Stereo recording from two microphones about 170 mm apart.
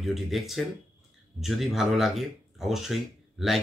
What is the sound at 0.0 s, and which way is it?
Speech, centre (ahead or behind).